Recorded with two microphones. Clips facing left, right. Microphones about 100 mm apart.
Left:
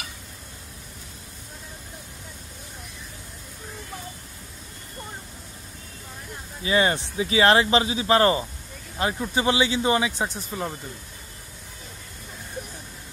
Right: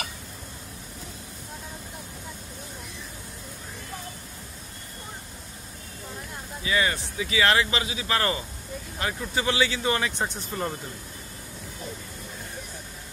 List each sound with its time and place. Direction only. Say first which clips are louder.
6.6 s speech: left 4 dB; 30° left (ahead or behind); by 10.8 s 5° left (ahead or behind)